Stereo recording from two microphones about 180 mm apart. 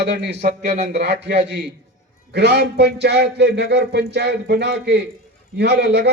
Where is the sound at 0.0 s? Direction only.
70° right (ahead or behind).